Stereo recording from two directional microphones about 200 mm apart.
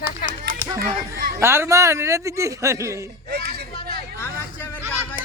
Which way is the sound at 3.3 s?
55° right (ahead or behind).